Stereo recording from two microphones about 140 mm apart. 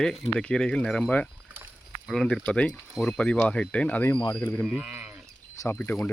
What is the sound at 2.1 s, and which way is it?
Speech, 5° left (ahead or behind).